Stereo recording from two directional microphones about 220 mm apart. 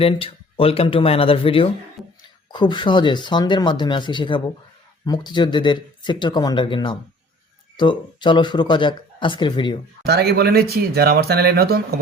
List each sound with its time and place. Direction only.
0.0 s speech: 25° left (ahead or behind)
2.0 s a sound: centre (ahead or behind)
2.5 s speech: 20° left (ahead or behind)
10.0 s speech: 45° right (ahead or behind)